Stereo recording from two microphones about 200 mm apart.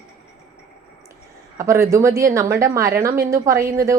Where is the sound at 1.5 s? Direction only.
15° right (ahead or behind).